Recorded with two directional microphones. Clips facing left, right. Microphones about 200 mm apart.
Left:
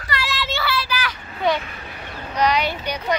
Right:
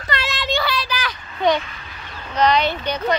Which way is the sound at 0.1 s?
20° right (ahead or behind).